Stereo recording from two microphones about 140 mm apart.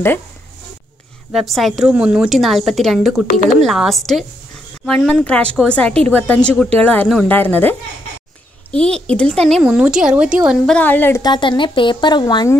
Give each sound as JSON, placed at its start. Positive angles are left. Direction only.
{"t": 1.3, "sound": "a woman's voice", "side_deg": 0}
{"t": 8.7, "sound": "speech", "side_deg": 5}
{"t": 9.6, "sound": "speech", "side_deg": -5}
{"t": 10.7, "sound": "speech", "side_deg": 10}
{"t": 11.2, "sound": "speech", "side_deg": 35}